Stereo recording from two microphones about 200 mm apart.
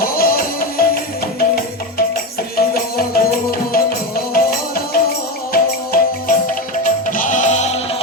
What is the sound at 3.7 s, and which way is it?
Music, 50° left (ahead or behind).